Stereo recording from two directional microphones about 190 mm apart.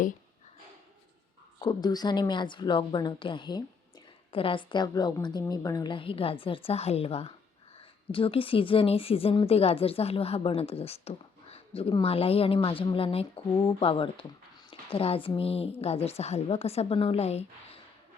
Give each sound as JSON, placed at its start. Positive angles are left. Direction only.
{"t": 1.6, "sound": "a woman's voice", "side_deg": 20}
{"t": 14.7, "sound": "a sound", "side_deg": 30}
{"t": 15.4, "sound": "a woman's voice", "side_deg": 30}